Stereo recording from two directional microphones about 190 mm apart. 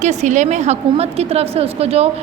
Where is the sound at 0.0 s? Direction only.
40° right (ahead or behind).